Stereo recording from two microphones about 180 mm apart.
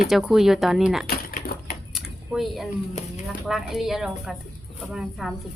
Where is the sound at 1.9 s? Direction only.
Centre (ahead or behind).